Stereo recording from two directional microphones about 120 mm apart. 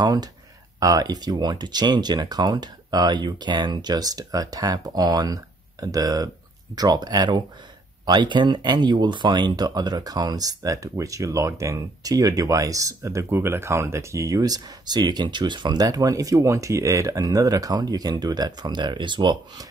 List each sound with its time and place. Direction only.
0.0 s speech: 35° right (ahead or behind)